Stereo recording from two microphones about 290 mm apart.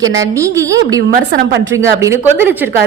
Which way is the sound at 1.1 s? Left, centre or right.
Right.